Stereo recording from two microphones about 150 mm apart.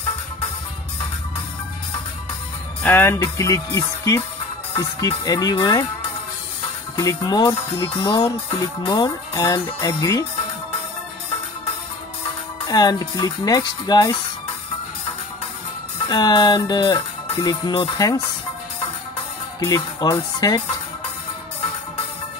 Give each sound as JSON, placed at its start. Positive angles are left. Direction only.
{"t": 2.8, "sound": "music", "side_deg": 15}
{"t": 3.2, "sound": "speech", "side_deg": 20}
{"t": 7.2, "sound": "speech", "side_deg": 30}
{"t": 12.6, "sound": "speech", "side_deg": 25}
{"t": 16.1, "sound": "speech", "side_deg": 30}
{"t": 19.6, "sound": "speech", "side_deg": 25}